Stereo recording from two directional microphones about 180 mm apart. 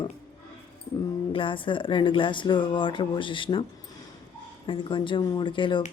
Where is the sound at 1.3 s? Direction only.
30° left (ahead or behind).